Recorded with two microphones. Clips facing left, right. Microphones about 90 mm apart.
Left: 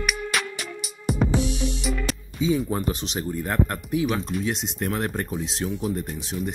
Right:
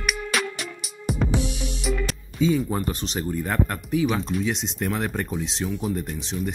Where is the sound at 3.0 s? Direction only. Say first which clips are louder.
Right 1 dB; 10° left (ahead or behind).